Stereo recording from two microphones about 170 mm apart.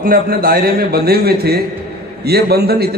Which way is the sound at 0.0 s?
60° right (ahead or behind).